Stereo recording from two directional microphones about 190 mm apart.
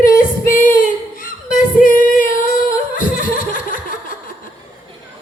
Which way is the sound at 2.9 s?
45° left (ahead or behind).